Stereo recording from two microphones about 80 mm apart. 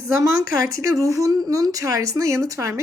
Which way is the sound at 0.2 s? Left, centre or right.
Right.